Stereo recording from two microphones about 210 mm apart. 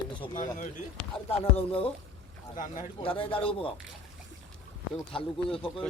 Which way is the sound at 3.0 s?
25° left (ahead or behind).